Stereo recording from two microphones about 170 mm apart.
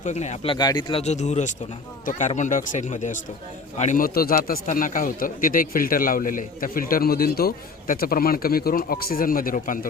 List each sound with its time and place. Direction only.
0.0 s speech: 40° left (ahead or behind)
0.5 s speech: 25° left (ahead or behind)
1.0 s speech: 40° left (ahead or behind)